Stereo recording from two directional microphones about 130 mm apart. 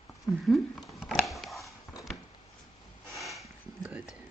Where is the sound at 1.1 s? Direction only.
Centre (ahead or behind).